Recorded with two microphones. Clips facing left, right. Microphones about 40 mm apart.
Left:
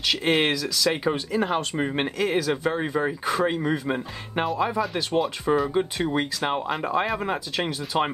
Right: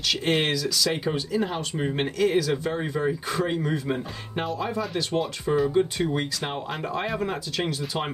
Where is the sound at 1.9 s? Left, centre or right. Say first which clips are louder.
Right 3 dB; centre.